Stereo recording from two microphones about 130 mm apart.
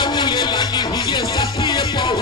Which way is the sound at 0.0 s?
35° left (ahead or behind).